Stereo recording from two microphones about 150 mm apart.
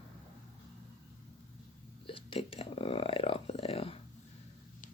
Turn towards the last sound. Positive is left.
turn(degrees=40)  # may be behind; listen again after turning